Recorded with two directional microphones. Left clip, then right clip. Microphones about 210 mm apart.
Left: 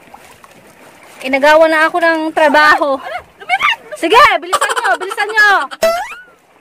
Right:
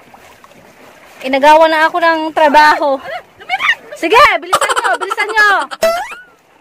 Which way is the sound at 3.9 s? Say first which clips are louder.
Even; centre (ahead or behind).